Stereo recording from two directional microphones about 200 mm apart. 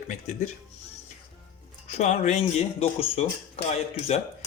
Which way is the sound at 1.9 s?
35° left (ahead or behind).